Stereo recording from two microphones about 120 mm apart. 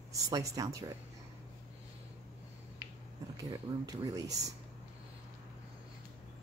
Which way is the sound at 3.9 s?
30° right (ahead or behind).